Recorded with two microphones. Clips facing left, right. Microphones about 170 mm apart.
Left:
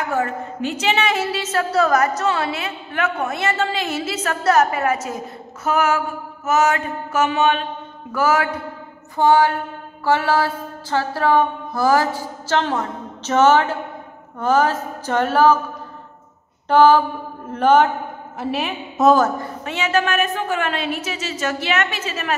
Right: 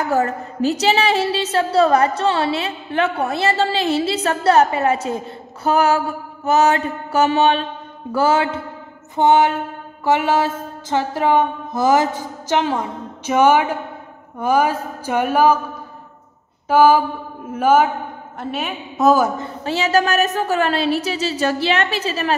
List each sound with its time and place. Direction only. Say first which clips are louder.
0.1 s a woman's voice: right 3 dB; 35° right (ahead or behind)
8.1 s a sound: right 2 dB; 30° right (ahead or behind); by 13.7 s 10° right (ahead or behind)
14.4 s speech: even; 10° right (ahead or behind)
16.6 s a sound: even; 10° right (ahead or behind)
17.5 s a woman's voice: even; 10° right (ahead or behind)
19.3 s a woman's voice: right 1 dB; 25° right (ahead or behind)
19.7 s a woman's voice: right 3 dB; 35° right (ahead or behind)